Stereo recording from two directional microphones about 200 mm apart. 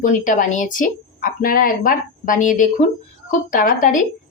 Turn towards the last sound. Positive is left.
turn(degrees=40)  # may be behind; listen again after turning